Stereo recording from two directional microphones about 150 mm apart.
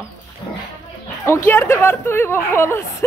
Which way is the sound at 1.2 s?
15° left (ahead or behind).